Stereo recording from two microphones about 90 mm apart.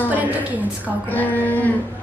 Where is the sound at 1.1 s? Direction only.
20° left (ahead or behind).